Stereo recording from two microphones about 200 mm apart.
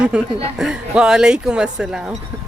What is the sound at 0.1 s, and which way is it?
Speech, 5° right (ahead or behind).